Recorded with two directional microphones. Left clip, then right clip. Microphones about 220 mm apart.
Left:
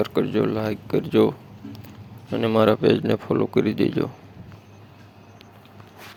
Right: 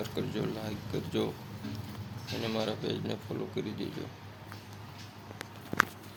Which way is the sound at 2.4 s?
40° left (ahead or behind).